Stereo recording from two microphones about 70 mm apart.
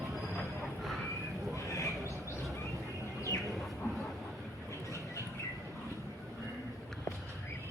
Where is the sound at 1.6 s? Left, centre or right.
Left.